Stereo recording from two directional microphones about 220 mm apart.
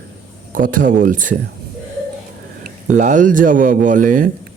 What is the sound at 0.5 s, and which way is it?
Speech, 35° right (ahead or behind).